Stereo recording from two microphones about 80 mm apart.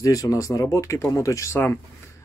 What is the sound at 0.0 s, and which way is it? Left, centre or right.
Speech, left.